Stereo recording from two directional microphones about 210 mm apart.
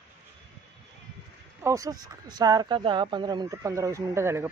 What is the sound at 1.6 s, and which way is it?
Speech, 15° right (ahead or behind).